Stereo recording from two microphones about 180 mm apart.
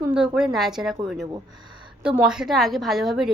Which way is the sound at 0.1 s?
5° right (ahead or behind).